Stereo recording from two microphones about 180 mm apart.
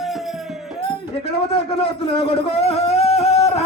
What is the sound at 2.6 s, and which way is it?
Music, 35° left (ahead or behind).